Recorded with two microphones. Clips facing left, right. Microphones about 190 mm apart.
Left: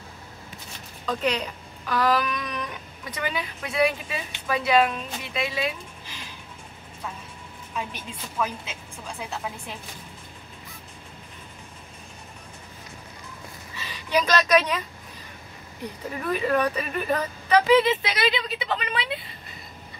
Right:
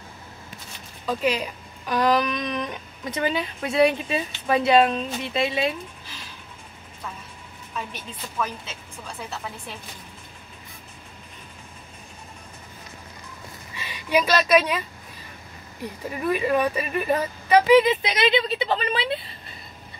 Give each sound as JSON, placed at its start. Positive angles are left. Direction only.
{"t": 1.0, "sound": "speech", "side_deg": -5}
{"t": 1.9, "sound": "speech", "side_deg": -20}
{"t": 7.9, "sound": "a woman's voice", "side_deg": 10}
{"t": 13.7, "sound": "speech", "side_deg": -10}
{"t": 16.3, "sound": "speech", "side_deg": -10}